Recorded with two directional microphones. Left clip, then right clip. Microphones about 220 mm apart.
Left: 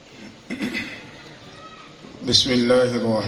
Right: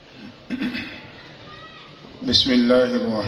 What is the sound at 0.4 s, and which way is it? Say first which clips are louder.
Chuckle: right 1 dB; 35° left (ahead or behind).